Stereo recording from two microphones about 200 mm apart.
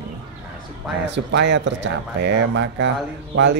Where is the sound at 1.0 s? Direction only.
60° right (ahead or behind).